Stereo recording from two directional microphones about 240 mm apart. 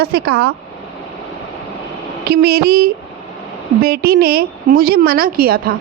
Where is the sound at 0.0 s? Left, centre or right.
Right.